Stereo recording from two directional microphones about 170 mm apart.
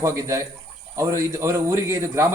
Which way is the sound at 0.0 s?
20° right (ahead or behind).